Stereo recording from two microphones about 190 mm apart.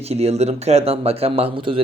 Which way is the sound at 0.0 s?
35° right (ahead or behind).